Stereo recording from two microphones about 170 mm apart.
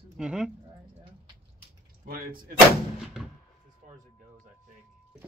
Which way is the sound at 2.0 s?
60° right (ahead or behind).